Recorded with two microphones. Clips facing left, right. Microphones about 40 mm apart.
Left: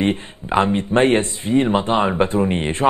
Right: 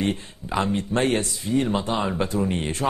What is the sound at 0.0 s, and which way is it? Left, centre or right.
Speech, left.